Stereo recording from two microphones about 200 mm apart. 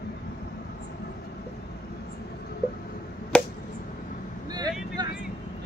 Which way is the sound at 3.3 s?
5° left (ahead or behind).